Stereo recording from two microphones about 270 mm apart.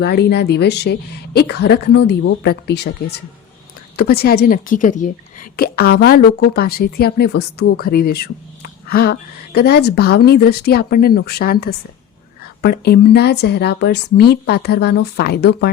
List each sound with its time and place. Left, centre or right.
0.0 s a woman's voice: left